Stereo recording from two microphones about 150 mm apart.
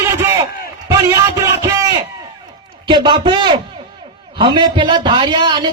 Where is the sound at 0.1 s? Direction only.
20° right (ahead or behind).